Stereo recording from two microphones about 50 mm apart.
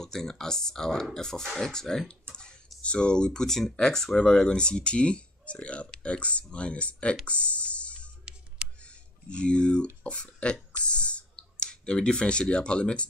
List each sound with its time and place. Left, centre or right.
0.0 s speech: centre; by 7.2 s left
7.2 s music: left
10.0 s speech: left